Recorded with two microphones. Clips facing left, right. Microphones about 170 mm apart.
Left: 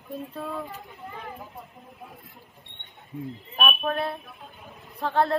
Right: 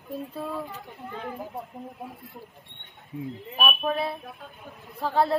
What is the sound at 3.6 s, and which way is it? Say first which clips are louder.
A woman's voice: even; centre (ahead or behind).